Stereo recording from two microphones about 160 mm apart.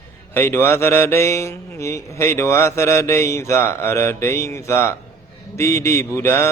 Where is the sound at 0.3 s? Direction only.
15° left (ahead or behind).